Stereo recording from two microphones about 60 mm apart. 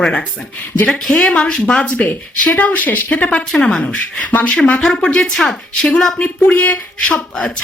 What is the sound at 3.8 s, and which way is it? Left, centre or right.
Speech, left.